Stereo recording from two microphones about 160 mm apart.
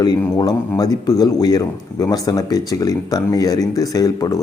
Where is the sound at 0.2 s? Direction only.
25° left (ahead or behind).